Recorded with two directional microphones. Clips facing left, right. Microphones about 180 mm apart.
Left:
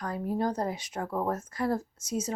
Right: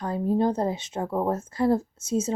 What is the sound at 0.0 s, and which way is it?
A woman's voice, 25° right (ahead or behind).